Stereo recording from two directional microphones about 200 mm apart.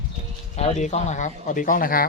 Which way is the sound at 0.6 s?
35° left (ahead or behind).